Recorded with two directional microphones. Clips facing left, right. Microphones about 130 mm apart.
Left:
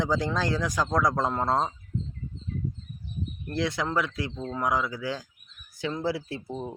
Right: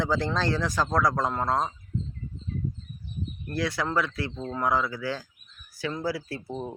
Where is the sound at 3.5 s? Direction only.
20° left (ahead or behind).